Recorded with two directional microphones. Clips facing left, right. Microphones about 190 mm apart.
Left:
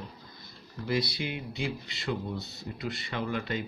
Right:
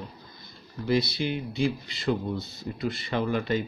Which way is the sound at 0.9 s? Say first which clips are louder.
Right 5 dB; 30° right (ahead or behind).